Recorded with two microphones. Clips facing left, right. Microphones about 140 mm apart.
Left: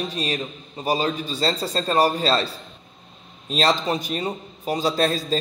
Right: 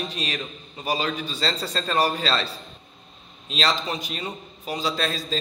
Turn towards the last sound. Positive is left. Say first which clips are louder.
# left 5 dB
turn(degrees=45)  # may be behind; listen again after turning